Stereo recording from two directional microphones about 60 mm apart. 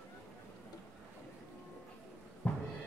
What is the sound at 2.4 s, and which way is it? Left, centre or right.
Music, left.